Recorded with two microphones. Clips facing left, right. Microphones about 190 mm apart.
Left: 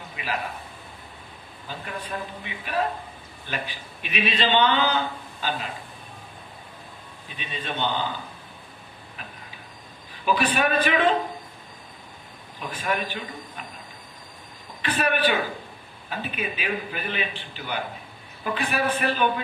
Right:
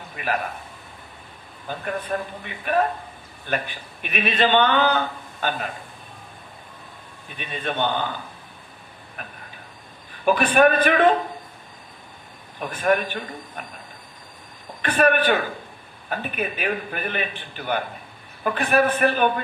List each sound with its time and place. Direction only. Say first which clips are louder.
0.2 s a man's voice: right 5 dB; 55° right (ahead or behind)
1.6 s a man's voice: right 6 dB; 55° right (ahead or behind)
7.3 s a man's voice: right 4 dB; 55° right (ahead or behind)
9.2 s a sound: right 4 dB; 55° right (ahead or behind)
10.2 s a man's voice: right 6 dB; 50° right (ahead or behind)
12.5 s a man's voice: right 7 dB; 55° right (ahead or behind)
14.8 s a man's voice: right 5 dB; 55° right (ahead or behind)